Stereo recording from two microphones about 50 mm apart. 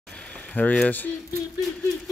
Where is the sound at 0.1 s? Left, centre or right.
Left.